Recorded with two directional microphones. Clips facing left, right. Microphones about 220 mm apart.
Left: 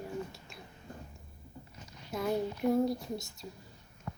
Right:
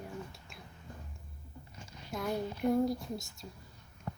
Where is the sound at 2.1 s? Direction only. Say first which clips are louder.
Left 3 dB; centre (ahead or behind).